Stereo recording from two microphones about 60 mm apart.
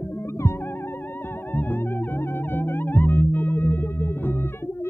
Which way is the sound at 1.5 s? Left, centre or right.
Left.